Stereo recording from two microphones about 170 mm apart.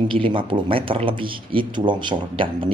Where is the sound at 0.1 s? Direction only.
30° right (ahead or behind).